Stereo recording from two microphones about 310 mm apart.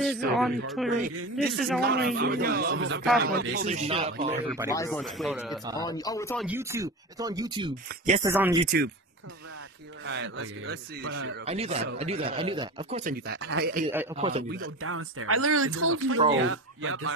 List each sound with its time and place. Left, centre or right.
0.0 s speech: centre
1.8 s a man's voice: right
4.6 s speech: centre
5.8 s speech: centre
6.4 s speech: centre
8.3 s speech: centre
8.6 s a man's voice: right
10.0 s a man's voice: right
11.4 s speech: centre
13.3 s a man's voice: right
14.1 s speech: centre
14.5 s a man's voice: right